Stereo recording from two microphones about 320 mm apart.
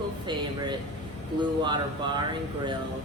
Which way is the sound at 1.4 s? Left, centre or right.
Centre.